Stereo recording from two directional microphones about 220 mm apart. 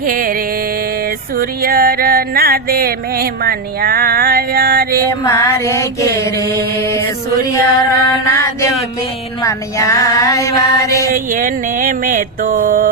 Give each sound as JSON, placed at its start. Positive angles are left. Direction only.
{"t": 0.0, "sound": "music", "side_deg": -40}
{"t": 5.3, "sound": "female singing", "side_deg": 15}
{"t": 7.5, "sound": "female singing", "side_deg": 15}
{"t": 11.1, "sound": "mantra", "side_deg": -40}